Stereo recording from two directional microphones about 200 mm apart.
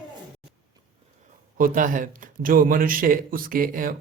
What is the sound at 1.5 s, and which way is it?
A man's voice, 40° right (ahead or behind).